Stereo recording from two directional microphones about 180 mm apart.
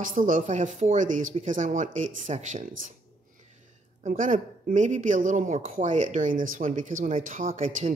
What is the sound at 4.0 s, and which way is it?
Speech, 45° right (ahead or behind).